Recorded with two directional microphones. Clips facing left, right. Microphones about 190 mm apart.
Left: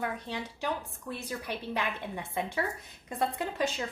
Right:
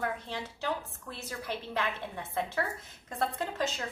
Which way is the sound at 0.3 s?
15° left (ahead or behind).